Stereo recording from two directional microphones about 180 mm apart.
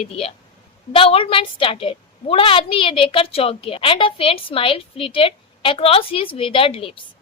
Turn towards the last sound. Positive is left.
turn(degrees=30)  # may be behind; listen again after turning